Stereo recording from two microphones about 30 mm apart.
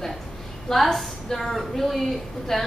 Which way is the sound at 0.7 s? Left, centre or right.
Centre.